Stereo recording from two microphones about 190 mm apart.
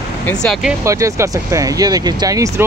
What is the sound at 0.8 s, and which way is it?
Speech, 15° right (ahead or behind).